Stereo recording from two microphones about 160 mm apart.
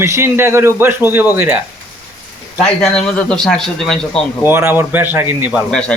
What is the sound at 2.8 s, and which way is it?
Speech, 5° left (ahead or behind).